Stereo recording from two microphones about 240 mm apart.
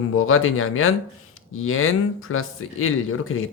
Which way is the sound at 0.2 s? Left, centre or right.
Left.